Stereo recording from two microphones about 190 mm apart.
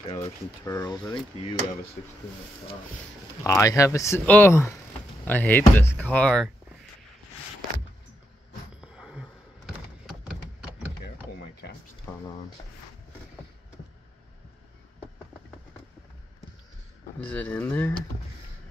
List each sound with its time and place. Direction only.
0.7 s speech: 20° left (ahead or behind)
2.0 s speech: 50° left (ahead or behind)
3.4 s speech: 15° left (ahead or behind)
8.8 s a sound: 5° right (ahead or behind)
11.6 s music: 55° left (ahead or behind)
12.1 s a sound: 20° left (ahead or behind)
17.2 s speech: 5° left (ahead or behind)